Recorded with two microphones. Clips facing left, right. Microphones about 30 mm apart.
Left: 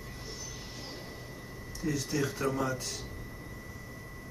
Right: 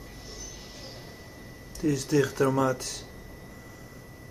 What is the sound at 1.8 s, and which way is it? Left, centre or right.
Speech, right.